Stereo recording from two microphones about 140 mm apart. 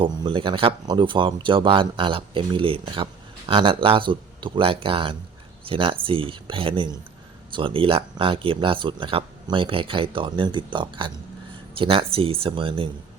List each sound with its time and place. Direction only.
0.0 s speech: 35° right (ahead or behind)